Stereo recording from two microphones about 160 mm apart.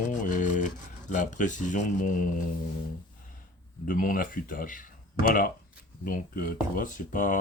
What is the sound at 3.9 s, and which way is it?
Speech, 60° left (ahead or behind).